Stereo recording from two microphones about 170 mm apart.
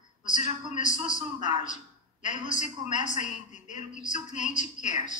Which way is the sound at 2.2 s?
45° left (ahead or behind).